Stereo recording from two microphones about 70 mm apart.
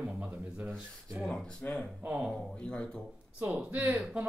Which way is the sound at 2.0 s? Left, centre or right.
Centre.